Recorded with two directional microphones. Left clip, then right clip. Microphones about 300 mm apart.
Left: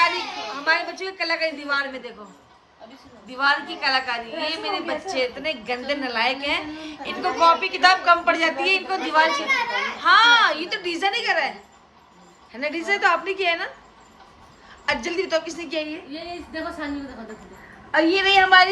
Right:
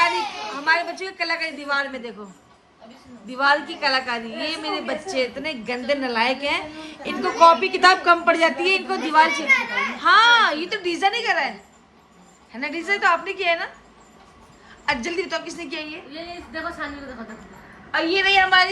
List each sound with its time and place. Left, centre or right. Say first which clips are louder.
0.5 s a woman's voice: right 1 dB; centre
3.2 s a woman's voice: right 2 dB; centre
12.5 s a woman's voice: even; centre
14.8 s a woman's voice: even; centre
18.1 s a woman's voice: left 1 dB; centre